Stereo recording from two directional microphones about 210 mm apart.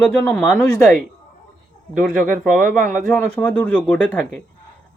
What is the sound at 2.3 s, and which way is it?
Speech, 40° right (ahead or behind).